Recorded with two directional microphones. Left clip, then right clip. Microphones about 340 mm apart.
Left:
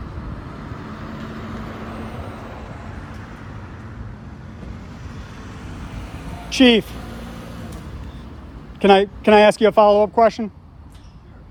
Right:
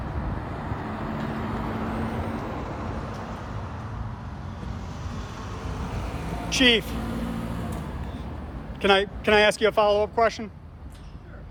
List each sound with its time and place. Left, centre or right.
0.6 s vehicle: right
6.5 s speech: centre
6.9 s vehicle: right
8.8 s speech: centre